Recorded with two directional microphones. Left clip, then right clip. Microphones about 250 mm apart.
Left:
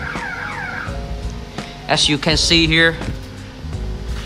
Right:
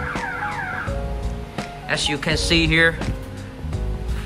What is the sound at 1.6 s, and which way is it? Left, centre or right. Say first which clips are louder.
Speech: left 6 dB; centre.